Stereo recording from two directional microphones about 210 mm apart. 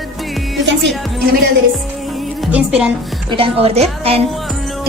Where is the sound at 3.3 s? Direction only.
25° right (ahead or behind).